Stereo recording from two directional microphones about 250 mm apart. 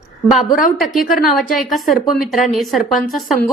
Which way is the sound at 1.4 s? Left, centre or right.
Centre.